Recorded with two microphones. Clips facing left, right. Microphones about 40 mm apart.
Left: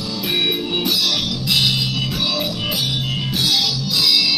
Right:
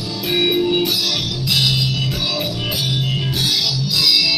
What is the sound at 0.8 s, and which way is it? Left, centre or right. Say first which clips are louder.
Music: even; centre.